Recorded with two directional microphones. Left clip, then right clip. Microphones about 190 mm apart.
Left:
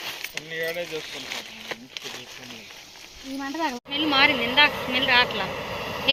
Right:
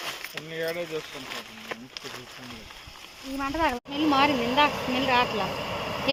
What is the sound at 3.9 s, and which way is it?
Speech, 30° right (ahead or behind).